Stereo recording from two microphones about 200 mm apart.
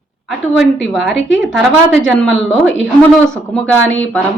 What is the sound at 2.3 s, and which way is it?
Speech, 70° left (ahead or behind).